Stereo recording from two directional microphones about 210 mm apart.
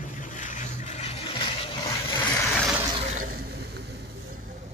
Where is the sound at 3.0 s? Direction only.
40° right (ahead or behind).